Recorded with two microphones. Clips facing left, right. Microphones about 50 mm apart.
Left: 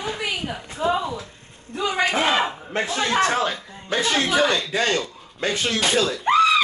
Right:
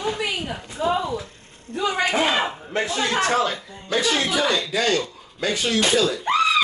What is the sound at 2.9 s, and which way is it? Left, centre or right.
Speech, left.